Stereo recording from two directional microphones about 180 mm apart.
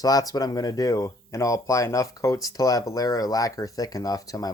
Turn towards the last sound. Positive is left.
turn(degrees=20)  # may be behind; listen again after turning